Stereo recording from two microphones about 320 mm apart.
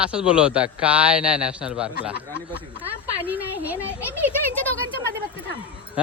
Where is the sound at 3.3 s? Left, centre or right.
Centre.